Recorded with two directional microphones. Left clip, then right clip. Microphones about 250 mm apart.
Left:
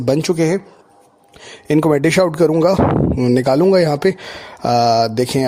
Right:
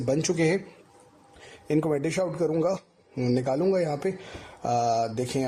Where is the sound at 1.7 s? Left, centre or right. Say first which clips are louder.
Left 12 dB; left.